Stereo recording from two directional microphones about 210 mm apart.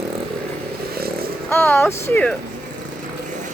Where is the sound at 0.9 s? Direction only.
45° right (ahead or behind).